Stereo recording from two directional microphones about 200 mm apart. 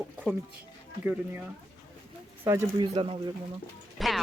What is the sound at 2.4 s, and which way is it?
Speech, 20° right (ahead or behind).